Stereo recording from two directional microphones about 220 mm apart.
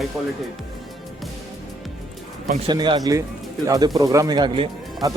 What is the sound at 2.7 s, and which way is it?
Speech, 20° right (ahead or behind).